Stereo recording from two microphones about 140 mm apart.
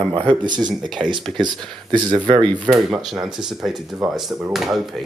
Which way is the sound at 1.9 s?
30° right (ahead or behind).